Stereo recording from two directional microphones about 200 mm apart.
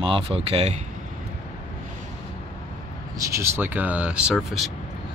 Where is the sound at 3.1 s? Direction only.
15° right (ahead or behind).